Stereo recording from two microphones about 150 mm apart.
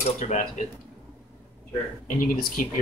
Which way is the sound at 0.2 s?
55° left (ahead or behind).